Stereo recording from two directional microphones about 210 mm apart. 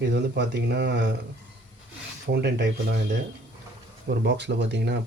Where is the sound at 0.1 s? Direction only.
55° right (ahead or behind).